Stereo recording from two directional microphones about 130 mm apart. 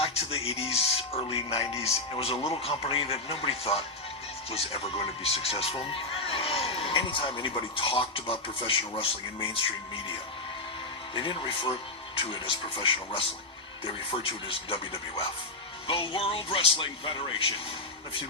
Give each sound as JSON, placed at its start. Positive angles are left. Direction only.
{"t": 0.0, "sound": "a man's voice", "side_deg": 50}
{"t": 11.1, "sound": "speech", "side_deg": 40}